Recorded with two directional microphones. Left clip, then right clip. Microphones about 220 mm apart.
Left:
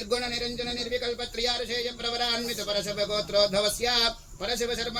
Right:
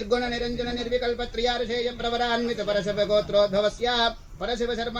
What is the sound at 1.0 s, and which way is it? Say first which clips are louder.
A man's voice: right 3 dB; 40° left (ahead or behind).